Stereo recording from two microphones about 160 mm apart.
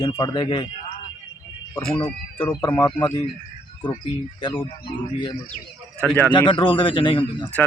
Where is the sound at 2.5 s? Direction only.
15° left (ahead or behind).